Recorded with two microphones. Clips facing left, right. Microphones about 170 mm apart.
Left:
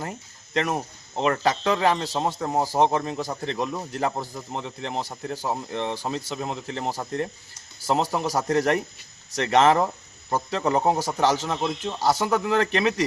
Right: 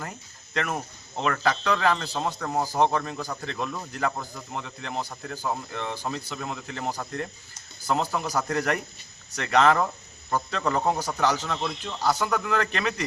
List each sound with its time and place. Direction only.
0.5 s speech: 20° left (ahead or behind)